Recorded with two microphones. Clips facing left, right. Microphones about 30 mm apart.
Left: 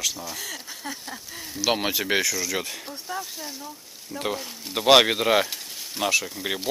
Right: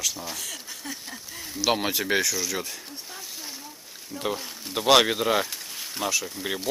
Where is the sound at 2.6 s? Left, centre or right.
Centre.